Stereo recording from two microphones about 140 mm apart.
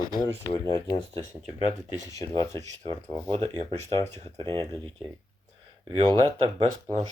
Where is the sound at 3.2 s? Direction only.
40° right (ahead or behind).